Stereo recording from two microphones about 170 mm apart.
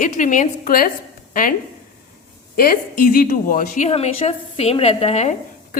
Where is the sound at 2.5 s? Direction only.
60° left (ahead or behind); by 5.8 s 45° left (ahead or behind).